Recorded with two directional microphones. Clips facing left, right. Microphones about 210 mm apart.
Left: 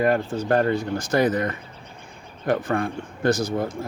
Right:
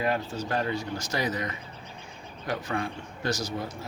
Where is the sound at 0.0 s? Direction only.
50° left (ahead or behind).